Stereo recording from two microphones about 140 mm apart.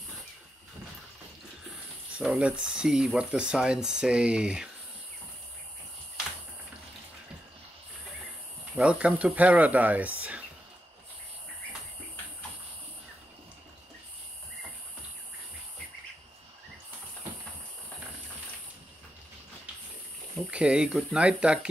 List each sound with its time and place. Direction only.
2.1 s speech: 5° right (ahead or behind)
8.7 s speech: 10° right (ahead or behind)
20.5 s speech: 5° right (ahead or behind)